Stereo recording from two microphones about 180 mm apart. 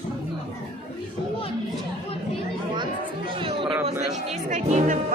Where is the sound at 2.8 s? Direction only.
30° right (ahead or behind).